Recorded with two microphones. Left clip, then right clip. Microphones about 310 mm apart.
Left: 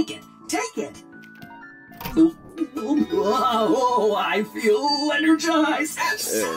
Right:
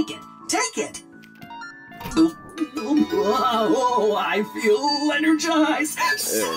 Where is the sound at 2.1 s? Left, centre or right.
Right.